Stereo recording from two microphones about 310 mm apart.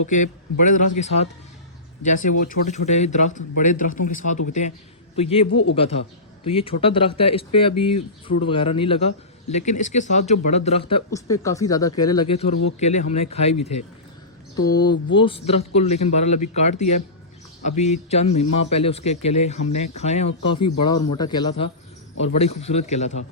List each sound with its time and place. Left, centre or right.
0.1 s a man's voice: left